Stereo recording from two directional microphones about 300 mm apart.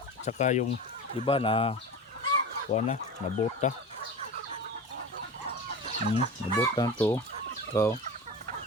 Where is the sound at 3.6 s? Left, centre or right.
Left.